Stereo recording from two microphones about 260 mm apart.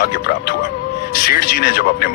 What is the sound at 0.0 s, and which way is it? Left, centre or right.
Speech, left.